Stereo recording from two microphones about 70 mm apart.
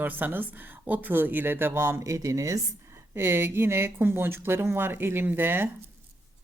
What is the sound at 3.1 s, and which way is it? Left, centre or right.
Speech, right.